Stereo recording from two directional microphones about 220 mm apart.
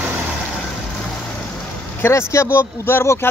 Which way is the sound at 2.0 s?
10° left (ahead or behind).